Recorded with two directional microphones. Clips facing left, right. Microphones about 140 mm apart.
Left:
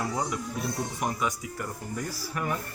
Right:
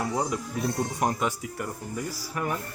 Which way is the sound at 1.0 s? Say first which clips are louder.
Right 3 dB; 35° right (ahead or behind).